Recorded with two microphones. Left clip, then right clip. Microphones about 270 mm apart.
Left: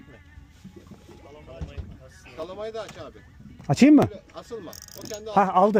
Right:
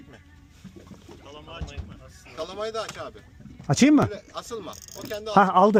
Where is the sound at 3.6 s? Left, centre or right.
Centre.